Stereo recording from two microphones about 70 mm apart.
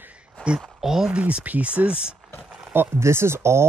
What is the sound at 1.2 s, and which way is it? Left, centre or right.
Speech, centre.